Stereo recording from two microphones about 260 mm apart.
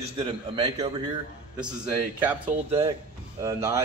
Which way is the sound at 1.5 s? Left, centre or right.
Centre.